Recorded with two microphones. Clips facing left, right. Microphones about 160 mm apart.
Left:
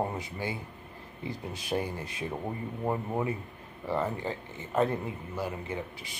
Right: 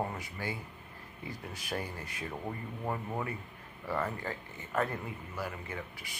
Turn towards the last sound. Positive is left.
turn(degrees=20)  # may be behind; listen again after turning